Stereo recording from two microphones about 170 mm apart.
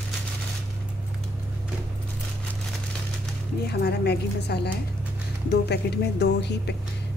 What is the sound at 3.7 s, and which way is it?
A woman's voice, 75° left (ahead or behind).